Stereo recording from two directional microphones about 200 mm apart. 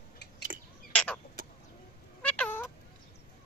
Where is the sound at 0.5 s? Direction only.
40° right (ahead or behind).